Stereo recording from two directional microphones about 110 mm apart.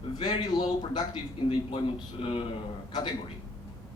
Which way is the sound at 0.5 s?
45° left (ahead or behind).